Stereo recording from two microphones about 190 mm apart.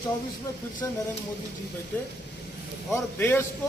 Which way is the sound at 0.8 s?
15° left (ahead or behind).